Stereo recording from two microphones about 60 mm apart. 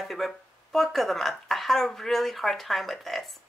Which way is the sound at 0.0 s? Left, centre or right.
Centre.